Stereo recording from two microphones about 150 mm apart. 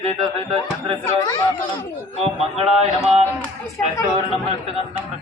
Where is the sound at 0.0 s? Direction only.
40° right (ahead or behind).